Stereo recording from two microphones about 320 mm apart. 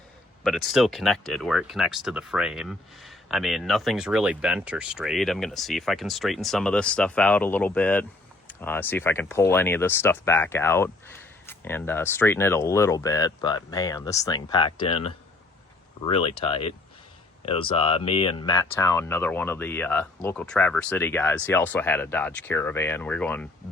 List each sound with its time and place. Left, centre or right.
0.4 s speech: centre